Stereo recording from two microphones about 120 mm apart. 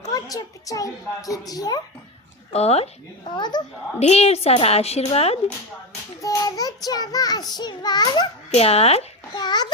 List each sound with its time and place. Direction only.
0.1 s child singing: 30° left (ahead or behind)
2.5 s a woman's voice: 60° left (ahead or behind)
3.2 s child singing: 40° left (ahead or behind)
4.0 s a woman's voice: 60° left (ahead or behind)
6.2 s child singing: 30° left (ahead or behind)
8.4 s a woman's voice: 60° left (ahead or behind)
9.3 s child singing: 35° left (ahead or behind)